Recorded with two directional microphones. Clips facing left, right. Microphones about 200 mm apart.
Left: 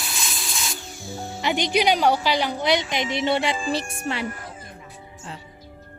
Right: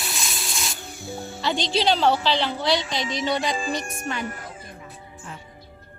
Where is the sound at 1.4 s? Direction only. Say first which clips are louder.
Left 2 dB; 20° left (ahead or behind).